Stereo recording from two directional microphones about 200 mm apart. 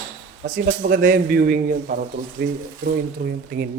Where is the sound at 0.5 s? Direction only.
50° right (ahead or behind).